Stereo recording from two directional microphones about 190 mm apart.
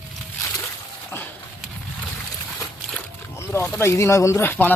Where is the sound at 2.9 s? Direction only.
10° left (ahead or behind).